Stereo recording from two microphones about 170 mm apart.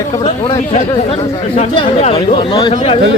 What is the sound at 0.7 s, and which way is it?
Speech, 35° left (ahead or behind).